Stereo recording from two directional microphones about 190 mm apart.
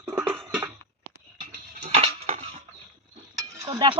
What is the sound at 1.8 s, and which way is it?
Music, 35° right (ahead or behind).